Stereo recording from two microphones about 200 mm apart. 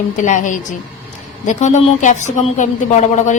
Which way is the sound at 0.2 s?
40° left (ahead or behind).